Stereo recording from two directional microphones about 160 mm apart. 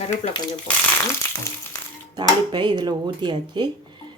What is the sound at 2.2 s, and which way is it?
Speech, 30° right (ahead or behind).